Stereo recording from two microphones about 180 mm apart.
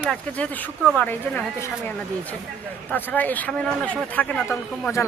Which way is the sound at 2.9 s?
10° left (ahead or behind).